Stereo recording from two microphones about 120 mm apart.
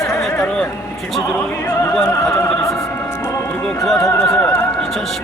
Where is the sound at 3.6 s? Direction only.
Centre (ahead or behind).